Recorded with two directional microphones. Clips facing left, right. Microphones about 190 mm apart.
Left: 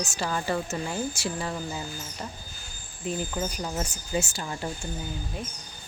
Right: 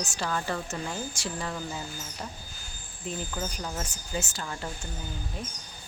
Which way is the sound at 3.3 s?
15° left (ahead or behind).